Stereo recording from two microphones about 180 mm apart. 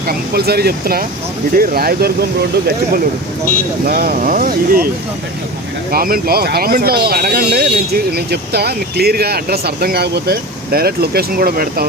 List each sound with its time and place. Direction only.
0.1 s speech: 60° right (ahead or behind)
3.8 s speech: 55° right (ahead or behind)
5.9 s speech: 55° right (ahead or behind)